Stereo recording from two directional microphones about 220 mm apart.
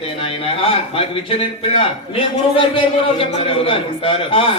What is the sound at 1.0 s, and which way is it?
A man's voice, 25° left (ahead or behind).